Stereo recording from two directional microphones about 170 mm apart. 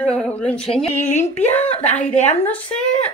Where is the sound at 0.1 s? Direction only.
5° left (ahead or behind).